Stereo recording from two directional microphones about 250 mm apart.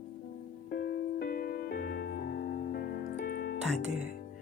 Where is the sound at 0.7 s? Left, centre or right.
Left.